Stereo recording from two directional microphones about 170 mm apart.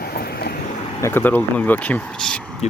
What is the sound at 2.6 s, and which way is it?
Speech, 40° left (ahead or behind).